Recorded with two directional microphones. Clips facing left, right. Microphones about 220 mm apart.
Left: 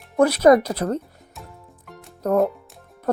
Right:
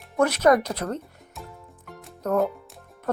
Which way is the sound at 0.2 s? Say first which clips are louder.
Left 5 dB; 35° left (ahead or behind).